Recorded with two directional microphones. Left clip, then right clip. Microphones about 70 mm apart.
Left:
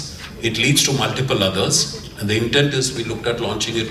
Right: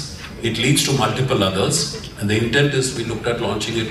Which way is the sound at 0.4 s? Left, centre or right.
Left.